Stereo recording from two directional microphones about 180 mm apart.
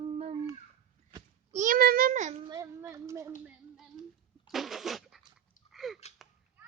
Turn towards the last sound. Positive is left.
turn(degrees=0)  # may be behind; listen again after turning